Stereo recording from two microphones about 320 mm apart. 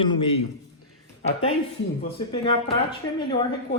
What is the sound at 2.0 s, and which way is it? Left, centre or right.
Speech, centre.